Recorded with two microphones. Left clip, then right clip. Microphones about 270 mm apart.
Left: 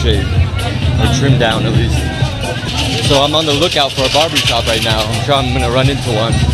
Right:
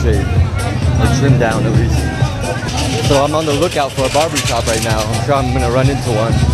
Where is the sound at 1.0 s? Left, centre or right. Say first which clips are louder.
Left 1 dB; centre.